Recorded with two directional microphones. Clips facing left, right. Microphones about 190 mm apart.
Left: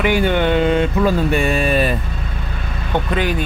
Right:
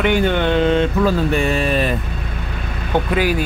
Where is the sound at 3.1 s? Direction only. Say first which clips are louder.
Right 2 dB; 5° right (ahead or behind).